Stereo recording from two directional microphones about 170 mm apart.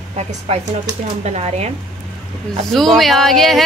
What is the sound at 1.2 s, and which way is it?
Speech, 40° right (ahead or behind).